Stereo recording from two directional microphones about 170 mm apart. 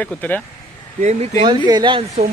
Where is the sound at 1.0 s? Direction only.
40° right (ahead or behind).